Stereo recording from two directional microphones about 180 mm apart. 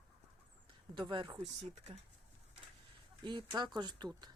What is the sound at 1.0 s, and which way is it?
Speech, 25° right (ahead or behind).